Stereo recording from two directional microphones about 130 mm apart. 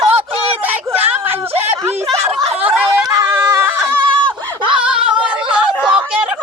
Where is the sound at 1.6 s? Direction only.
20° right (ahead or behind).